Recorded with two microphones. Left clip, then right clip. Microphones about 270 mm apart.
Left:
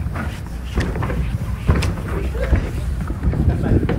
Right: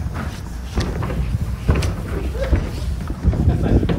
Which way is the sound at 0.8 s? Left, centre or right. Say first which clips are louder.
Left 1 dB; centre.